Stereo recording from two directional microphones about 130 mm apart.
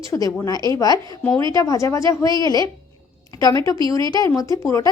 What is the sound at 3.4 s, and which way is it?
Speech, 25° left (ahead or behind).